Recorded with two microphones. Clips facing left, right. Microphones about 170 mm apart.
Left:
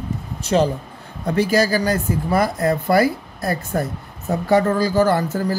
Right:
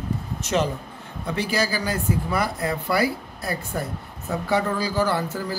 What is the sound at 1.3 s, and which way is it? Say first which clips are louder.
Speech: left 7 dB; 45° left (ahead or behind).